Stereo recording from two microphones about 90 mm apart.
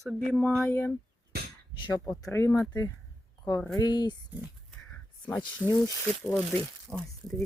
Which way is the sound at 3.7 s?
50° left (ahead or behind).